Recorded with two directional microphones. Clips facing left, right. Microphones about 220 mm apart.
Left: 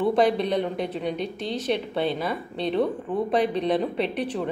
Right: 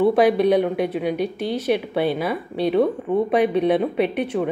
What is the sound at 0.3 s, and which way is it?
Speech, 60° right (ahead or behind).